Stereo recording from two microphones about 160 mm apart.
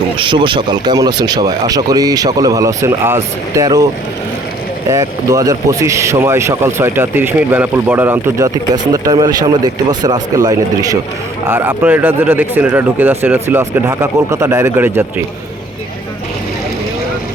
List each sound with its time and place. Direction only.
0.2 s speech: 30° right (ahead or behind)
4.9 s speech: 20° right (ahead or behind)